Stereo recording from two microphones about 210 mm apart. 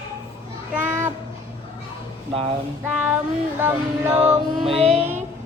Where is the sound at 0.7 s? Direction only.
10° right (ahead or behind).